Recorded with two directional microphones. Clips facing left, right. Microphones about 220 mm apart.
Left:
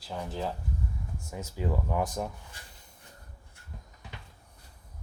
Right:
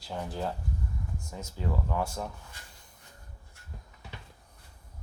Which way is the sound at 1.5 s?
15° left (ahead or behind).